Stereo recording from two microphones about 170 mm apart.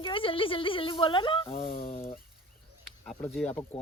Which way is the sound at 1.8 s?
35° left (ahead or behind).